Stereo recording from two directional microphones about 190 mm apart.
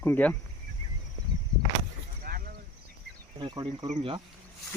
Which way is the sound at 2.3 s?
50° right (ahead or behind).